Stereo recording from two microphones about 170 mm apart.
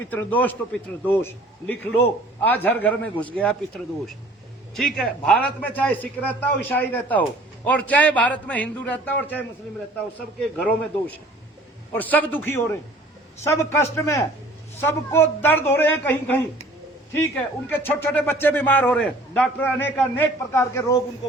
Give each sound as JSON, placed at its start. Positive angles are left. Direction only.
{"t": 0.1, "sound": "a man's voice", "side_deg": 10}
{"t": 4.7, "sound": "a man's voice", "side_deg": 0}
{"t": 11.9, "sound": "a man's voice", "side_deg": 10}